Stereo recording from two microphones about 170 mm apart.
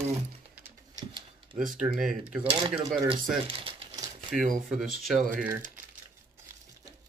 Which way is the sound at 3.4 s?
35° right (ahead or behind).